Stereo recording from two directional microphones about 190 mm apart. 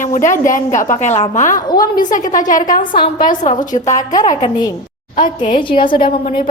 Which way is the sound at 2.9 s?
25° left (ahead or behind).